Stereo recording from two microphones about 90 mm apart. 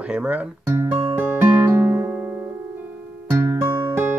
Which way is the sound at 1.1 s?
25° right (ahead or behind).